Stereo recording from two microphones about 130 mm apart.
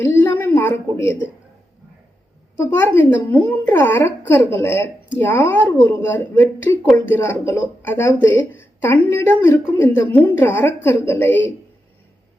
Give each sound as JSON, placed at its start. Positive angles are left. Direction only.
{"t": 0.0, "sound": "a woman's voice", "side_deg": 15}
{"t": 2.6, "sound": "speech", "side_deg": 15}